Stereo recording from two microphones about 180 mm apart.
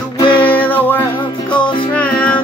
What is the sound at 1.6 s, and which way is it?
Music, 25° left (ahead or behind).